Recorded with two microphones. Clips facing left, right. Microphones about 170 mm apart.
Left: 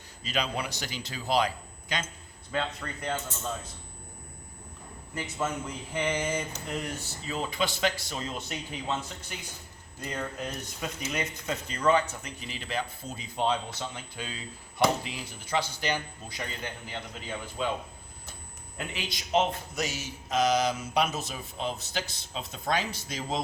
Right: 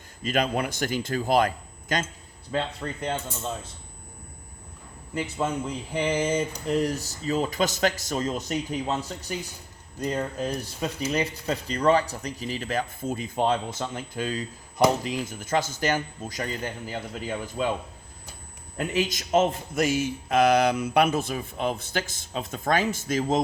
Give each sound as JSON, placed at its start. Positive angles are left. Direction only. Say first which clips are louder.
{"t": 0.2, "sound": "speech", "louder": "right 6 dB", "side_deg": -50}
{"t": 2.5, "sound": "speech", "louder": "right 4 dB", "side_deg": -30}
{"t": 5.1, "sound": "speech", "louder": "right 5 dB", "side_deg": -30}
{"t": 18.9, "sound": "speech", "louder": "right 5 dB", "side_deg": -45}